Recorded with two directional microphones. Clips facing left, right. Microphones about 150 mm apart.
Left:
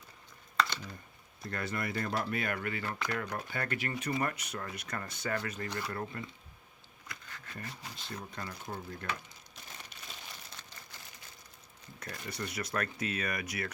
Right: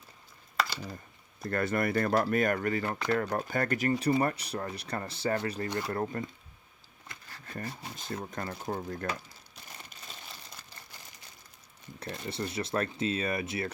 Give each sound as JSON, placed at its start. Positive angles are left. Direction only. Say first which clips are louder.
{"t": 1.4, "sound": "speech", "louder": "right 8 dB", "side_deg": -50}
{"t": 2.2, "sound": "speech", "louder": "right 7 dB", "side_deg": -45}
{"t": 7.1, "sound": "a sound", "louder": "right 4 dB", "side_deg": -35}
{"t": 8.2, "sound": "speech", "louder": "right 6 dB", "side_deg": -45}
{"t": 11.9, "sound": "speech", "louder": "right 5 dB", "side_deg": -25}